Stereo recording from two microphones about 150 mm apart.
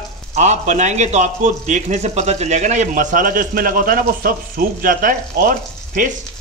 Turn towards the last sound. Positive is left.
turn(degrees=-65)  # may be behind; listen again after turning